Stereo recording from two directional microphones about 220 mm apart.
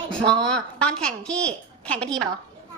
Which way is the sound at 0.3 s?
5° left (ahead or behind).